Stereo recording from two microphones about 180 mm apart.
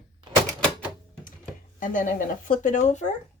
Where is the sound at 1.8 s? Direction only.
45° left (ahead or behind).